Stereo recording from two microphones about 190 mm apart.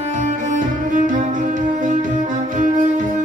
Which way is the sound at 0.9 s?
45° right (ahead or behind).